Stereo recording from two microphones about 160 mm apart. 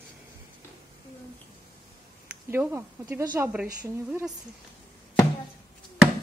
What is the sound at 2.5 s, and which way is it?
Speech, 15° right (ahead or behind).